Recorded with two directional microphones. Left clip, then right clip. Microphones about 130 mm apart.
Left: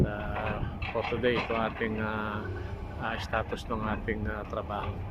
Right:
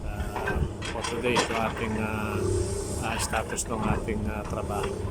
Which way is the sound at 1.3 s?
10° right (ahead or behind).